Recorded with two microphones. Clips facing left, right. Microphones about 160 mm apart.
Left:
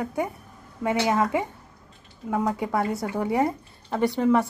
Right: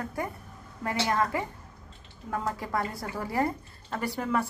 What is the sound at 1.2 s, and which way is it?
Speech, 20° left (ahead or behind).